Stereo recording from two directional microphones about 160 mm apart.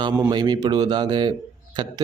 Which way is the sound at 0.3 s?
25° right (ahead or behind).